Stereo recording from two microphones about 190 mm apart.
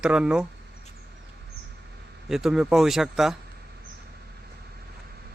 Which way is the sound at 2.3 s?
Centre (ahead or behind).